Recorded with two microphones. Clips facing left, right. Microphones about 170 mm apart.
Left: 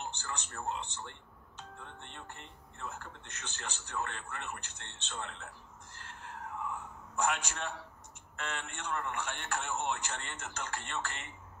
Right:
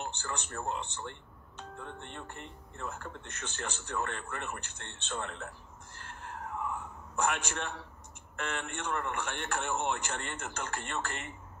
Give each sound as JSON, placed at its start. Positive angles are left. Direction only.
{"t": 0.0, "sound": "a man's voice", "side_deg": -55}
{"t": 5.9, "sound": "a sound", "side_deg": -50}
{"t": 7.2, "sound": "a man's voice", "side_deg": -55}